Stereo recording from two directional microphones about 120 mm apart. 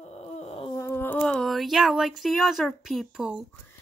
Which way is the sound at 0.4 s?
60° left (ahead or behind).